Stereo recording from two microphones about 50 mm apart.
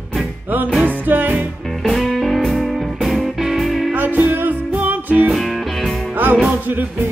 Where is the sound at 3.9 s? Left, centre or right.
Right.